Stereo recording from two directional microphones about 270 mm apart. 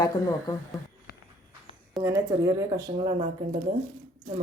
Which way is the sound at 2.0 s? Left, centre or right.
Centre.